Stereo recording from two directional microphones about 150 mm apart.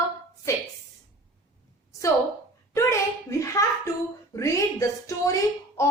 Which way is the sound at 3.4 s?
20° left (ahead or behind).